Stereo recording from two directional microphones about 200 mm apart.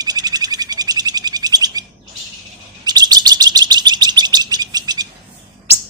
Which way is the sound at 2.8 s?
20° right (ahead or behind).